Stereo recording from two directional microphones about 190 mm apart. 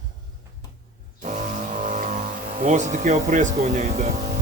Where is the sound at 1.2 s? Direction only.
40° right (ahead or behind).